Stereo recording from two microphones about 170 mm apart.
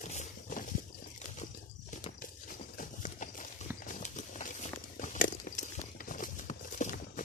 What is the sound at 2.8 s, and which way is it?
Clip-clop, 50° left (ahead or behind).